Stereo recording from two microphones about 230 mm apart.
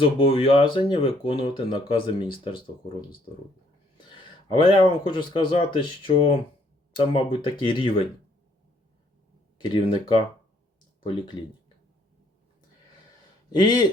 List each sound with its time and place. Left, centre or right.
0.0 s speech: left
4.6 s speech: left
9.6 s speech: left
13.5 s speech: centre